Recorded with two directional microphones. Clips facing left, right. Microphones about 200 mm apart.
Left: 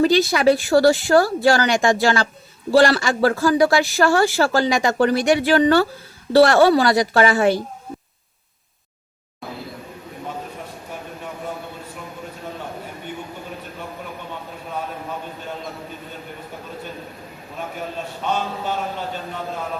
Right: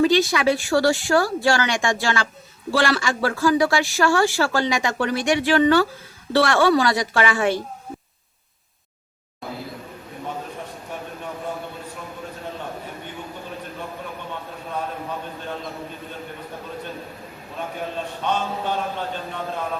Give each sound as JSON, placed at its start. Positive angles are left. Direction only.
{"t": 0.0, "sound": "speech", "side_deg": 35}